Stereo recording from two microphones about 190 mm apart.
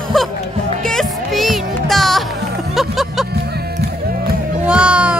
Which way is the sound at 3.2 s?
60° right (ahead or behind).